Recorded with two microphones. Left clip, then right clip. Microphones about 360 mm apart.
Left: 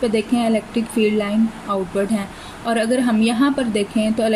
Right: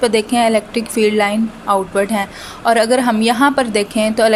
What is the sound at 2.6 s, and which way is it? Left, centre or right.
A woman's voice, centre.